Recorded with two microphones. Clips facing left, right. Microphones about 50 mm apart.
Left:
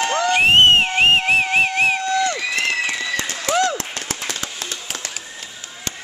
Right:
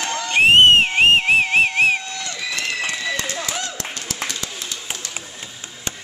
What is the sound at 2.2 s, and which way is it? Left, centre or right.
Crowd, left.